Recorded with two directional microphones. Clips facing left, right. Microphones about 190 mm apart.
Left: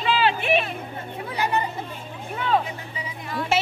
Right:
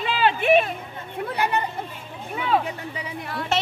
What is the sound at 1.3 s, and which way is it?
Speech, 60° right (ahead or behind).